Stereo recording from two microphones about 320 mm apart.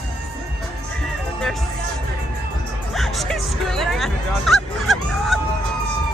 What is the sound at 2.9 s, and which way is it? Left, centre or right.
Music, centre.